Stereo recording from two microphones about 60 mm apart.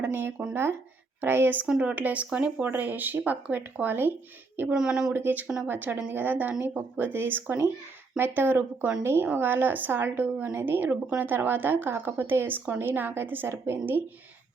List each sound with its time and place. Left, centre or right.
0.0 s speech: right
1.6 s speech: centre
4.7 s speech: centre
5.1 s speech: right